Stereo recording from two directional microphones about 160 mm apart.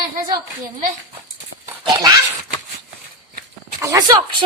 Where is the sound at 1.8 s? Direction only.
25° right (ahead or behind).